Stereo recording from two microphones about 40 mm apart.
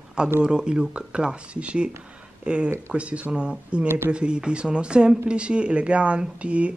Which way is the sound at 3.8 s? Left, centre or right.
Right.